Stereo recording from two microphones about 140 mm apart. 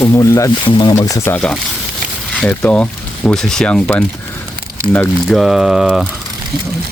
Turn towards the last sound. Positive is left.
turn(degrees=-5)  # may be behind; listen again after turning